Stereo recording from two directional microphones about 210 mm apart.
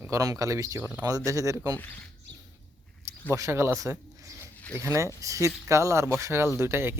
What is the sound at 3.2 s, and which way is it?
Speech, 15° right (ahead or behind).